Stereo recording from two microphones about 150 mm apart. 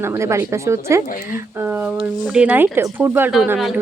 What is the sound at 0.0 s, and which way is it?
Speech, 15° right (ahead or behind).